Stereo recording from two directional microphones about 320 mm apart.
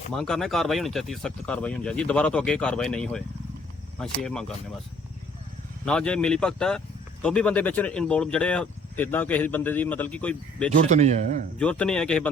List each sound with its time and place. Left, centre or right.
0.1 s speech: centre
5.8 s speech: centre
10.8 s speech: right
11.6 s speech: centre